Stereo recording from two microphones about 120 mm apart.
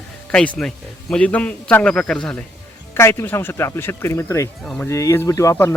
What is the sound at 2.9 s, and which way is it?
Speech, 20° left (ahead or behind).